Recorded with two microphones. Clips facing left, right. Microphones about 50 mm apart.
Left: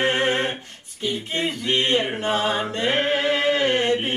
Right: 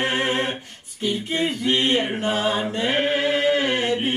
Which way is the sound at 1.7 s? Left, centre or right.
Centre.